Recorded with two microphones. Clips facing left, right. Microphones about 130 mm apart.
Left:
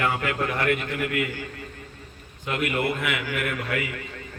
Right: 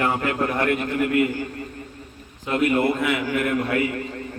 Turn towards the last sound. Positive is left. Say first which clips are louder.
# right 7 dB
turn(degrees=-35)  # may be behind; listen again after turning